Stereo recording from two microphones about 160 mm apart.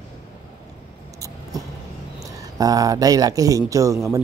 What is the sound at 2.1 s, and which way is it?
A man's voice, 20° right (ahead or behind).